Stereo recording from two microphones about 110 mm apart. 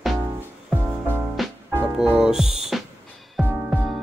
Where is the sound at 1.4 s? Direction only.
Centre (ahead or behind).